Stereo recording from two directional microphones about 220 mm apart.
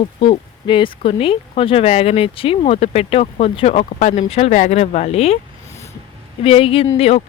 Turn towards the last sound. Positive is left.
turn(degrees=30)  # may be behind; listen again after turning